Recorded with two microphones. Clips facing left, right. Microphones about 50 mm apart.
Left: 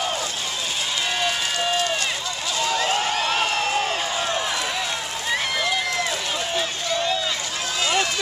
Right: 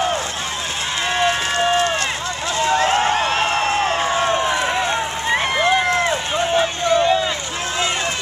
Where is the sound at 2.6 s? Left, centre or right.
Right.